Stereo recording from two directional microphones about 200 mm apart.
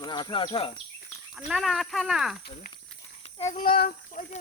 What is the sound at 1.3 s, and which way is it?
Speech, centre (ahead or behind).